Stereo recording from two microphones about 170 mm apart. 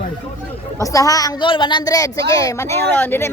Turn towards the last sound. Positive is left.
turn(degrees=15)  # may be behind; listen again after turning